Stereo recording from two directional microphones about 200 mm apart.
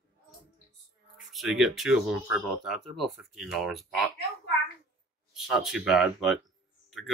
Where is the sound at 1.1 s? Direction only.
Centre (ahead or behind).